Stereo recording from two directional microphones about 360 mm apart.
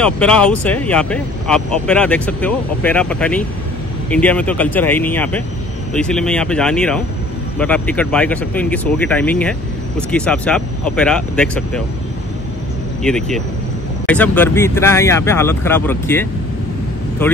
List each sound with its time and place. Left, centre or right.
0.0 s speech: centre
13.0 s speech: centre